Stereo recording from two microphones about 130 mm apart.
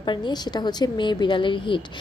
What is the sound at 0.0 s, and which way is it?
A woman's voice, 35° left (ahead or behind).